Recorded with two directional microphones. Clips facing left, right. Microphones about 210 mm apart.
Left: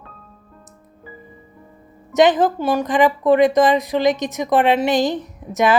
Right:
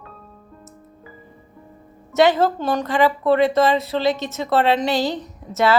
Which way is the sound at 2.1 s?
15° left (ahead or behind).